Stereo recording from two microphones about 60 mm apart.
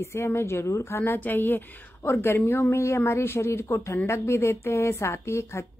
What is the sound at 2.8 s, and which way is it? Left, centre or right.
Speech, left.